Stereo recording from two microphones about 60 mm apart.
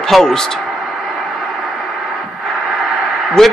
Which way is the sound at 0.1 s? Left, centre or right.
Centre.